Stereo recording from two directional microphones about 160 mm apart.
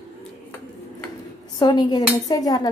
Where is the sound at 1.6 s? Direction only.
25° left (ahead or behind).